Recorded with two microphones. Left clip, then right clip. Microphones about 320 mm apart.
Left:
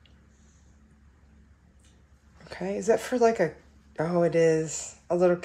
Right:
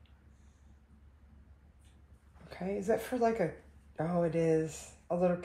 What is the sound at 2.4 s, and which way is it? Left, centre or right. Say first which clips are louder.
Speech: left 8 dB; left.